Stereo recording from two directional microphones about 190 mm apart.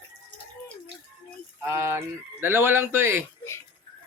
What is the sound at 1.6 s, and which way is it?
Speech, 15° right (ahead or behind).